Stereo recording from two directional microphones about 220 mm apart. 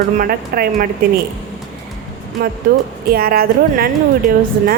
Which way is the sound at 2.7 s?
45° right (ahead or behind).